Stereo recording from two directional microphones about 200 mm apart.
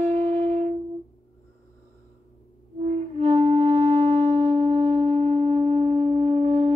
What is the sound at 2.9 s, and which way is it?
Music, 30° right (ahead or behind).